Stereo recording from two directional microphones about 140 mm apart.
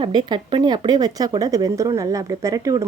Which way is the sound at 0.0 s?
30° right (ahead or behind).